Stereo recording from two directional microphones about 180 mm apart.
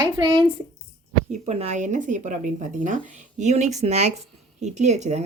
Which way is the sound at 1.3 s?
35° right (ahead or behind).